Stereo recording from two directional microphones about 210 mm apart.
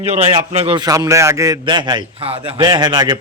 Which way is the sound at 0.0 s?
30° right (ahead or behind).